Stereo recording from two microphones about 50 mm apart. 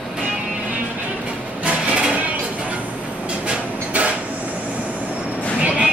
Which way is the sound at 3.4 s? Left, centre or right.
Right.